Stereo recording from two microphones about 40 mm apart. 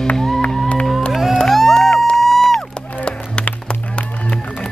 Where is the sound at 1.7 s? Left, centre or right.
Left.